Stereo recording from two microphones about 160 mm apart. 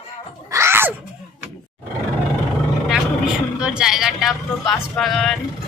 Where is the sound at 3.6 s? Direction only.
5° right (ahead or behind).